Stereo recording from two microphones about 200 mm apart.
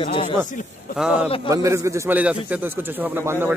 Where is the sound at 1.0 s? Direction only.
5° right (ahead or behind).